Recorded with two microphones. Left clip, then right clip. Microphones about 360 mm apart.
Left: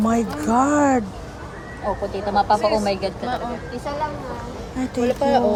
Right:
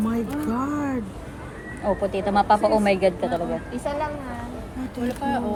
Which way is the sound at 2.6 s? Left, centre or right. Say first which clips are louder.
Left 1 dB; right.